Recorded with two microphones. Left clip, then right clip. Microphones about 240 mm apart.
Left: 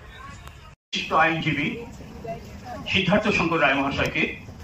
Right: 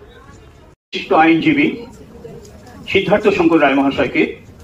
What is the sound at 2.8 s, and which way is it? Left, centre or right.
A man's voice, right.